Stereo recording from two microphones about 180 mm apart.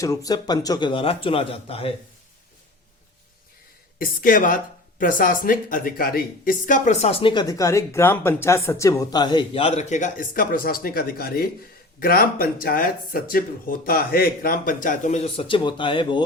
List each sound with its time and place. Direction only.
0.0 s speech: 20° left (ahead or behind)
3.9 s speech: 50° left (ahead or behind); by 16.2 s 25° left (ahead or behind)